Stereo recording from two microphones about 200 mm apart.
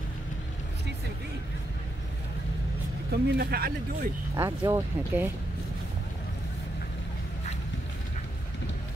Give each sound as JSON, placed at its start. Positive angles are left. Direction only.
{"t": 3.1, "sound": "speech", "side_deg": -50}
{"t": 4.4, "sound": "speech", "side_deg": -15}